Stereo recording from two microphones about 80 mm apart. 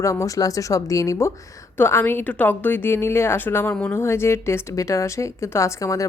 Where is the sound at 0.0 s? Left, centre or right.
Left.